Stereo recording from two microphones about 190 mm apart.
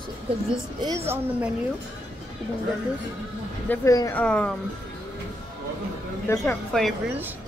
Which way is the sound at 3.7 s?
15° left (ahead or behind).